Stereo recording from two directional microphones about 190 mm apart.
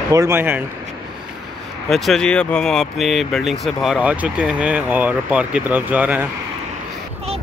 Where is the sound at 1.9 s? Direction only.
Centre (ahead or behind).